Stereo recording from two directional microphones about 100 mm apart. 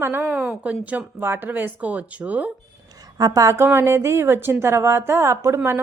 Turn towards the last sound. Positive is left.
turn(degrees=-25)  # may be behind; listen again after turning